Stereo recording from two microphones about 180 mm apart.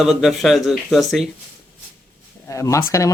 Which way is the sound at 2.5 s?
15° left (ahead or behind).